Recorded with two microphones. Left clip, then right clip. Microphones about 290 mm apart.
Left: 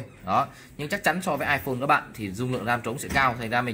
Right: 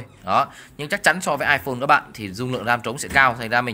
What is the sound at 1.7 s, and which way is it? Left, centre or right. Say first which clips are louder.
A man's voice: right 5 dB; right.